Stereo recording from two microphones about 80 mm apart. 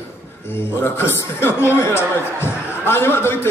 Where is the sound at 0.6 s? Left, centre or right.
Left.